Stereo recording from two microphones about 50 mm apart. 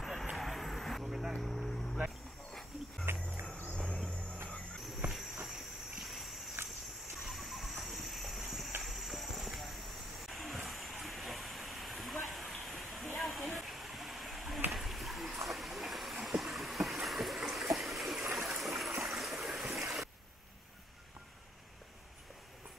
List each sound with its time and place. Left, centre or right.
0.0 s vehicle: centre
1.0 s vehicle: centre
1.4 s vehicle: centre
3.1 s cricket: right
3.7 s vehicle: centre
4.7 s cricket: centre
5.4 s a sound: centre
12.6 s waterfall: centre
14.7 s a sound: centre
17.7 s stream: centre